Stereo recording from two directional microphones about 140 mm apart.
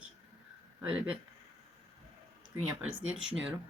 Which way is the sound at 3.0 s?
5° right (ahead or behind).